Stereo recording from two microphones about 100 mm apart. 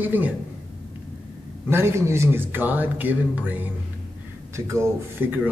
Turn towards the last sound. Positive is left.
turn(degrees=-20)  # may be behind; listen again after turning